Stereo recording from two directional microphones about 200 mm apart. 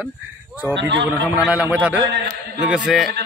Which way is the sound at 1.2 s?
5° right (ahead or behind).